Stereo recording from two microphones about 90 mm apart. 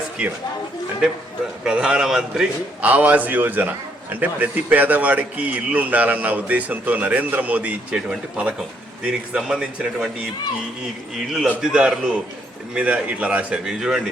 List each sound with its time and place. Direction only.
0.2 s a man's voice: 15° right (ahead or behind)
1.6 s a man's voice: 10° right (ahead or behind)
11.4 s a man's voice: 10° right (ahead or behind)
13.7 s speech: 5° right (ahead or behind)